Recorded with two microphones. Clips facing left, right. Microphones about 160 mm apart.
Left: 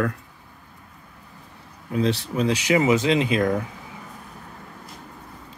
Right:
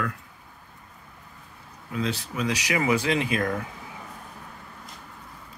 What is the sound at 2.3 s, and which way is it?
Speech, 30° left (ahead or behind).